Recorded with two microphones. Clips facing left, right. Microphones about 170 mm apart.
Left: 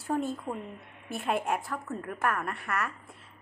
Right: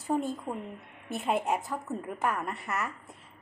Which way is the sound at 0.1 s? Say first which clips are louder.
Right 1 dB; 15° right (ahead or behind).